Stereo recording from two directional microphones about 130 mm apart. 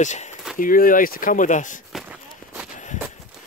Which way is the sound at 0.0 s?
65° left (ahead or behind).